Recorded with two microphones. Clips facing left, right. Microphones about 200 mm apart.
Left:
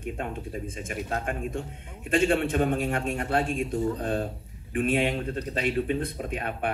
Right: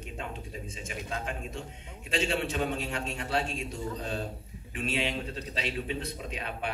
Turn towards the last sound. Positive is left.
turn(degrees=50)  # may be behind; listen again after turning